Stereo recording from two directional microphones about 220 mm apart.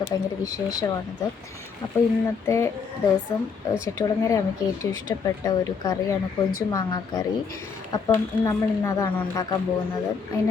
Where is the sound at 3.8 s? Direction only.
15° left (ahead or behind).